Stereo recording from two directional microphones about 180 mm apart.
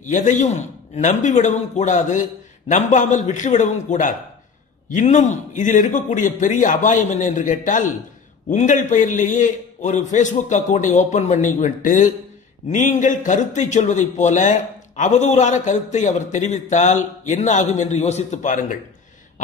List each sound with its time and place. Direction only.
0.0 s a man's voice: 45° left (ahead or behind)